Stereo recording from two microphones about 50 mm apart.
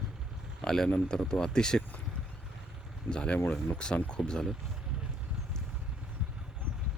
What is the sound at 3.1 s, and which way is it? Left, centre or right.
Speech, centre.